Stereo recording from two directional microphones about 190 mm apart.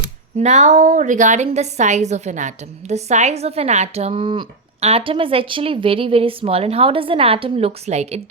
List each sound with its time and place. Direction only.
0.3 s a woman's voice: 35° right (ahead or behind)